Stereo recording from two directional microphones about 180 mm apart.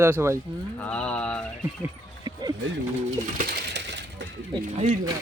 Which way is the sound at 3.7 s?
75° right (ahead or behind).